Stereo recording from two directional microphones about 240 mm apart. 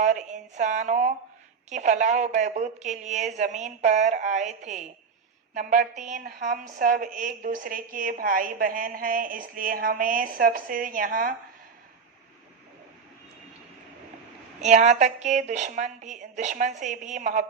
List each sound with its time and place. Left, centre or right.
0.0 s a woman's voice: right
14.6 s a woman's voice: right